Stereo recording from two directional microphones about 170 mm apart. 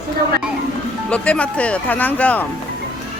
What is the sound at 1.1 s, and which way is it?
Speech, 5° left (ahead or behind).